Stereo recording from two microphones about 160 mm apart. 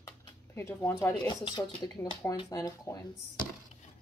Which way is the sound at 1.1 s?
30° left (ahead or behind).